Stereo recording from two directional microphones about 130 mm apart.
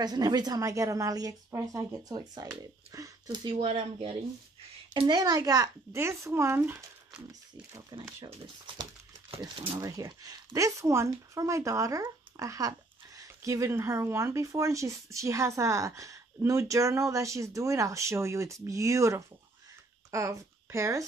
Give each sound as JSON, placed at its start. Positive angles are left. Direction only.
{"t": 0.0, "sound": "speech", "side_deg": -30}
{"t": 3.5, "sound": "speech", "side_deg": -50}
{"t": 4.9, "sound": "speech", "side_deg": -35}
{"t": 9.8, "sound": "speech", "side_deg": -25}